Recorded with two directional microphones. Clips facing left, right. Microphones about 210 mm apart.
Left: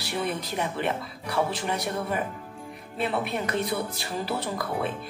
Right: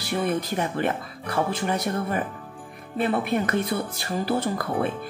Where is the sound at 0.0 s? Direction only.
50° right (ahead or behind).